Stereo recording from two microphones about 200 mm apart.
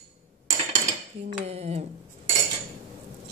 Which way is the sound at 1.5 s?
30° right (ahead or behind).